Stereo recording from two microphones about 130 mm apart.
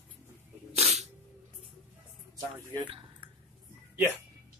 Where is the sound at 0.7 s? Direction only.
55° right (ahead or behind).